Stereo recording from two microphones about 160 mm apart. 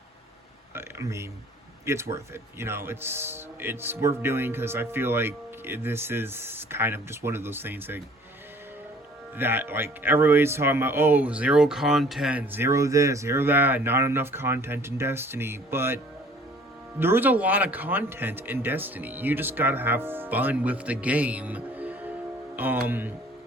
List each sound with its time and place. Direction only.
0.7 s a sound: 15° right (ahead or behind)
1.8 s speech: 15° right (ahead or behind)
9.4 s speech: 15° right (ahead or behind)
17.0 s speech: 10° right (ahead or behind)